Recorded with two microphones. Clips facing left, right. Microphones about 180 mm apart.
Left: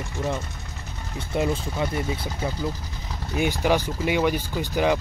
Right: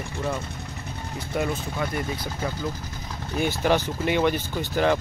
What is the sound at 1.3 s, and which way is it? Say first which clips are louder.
Speech: left 2 dB; 25° left (ahead or behind).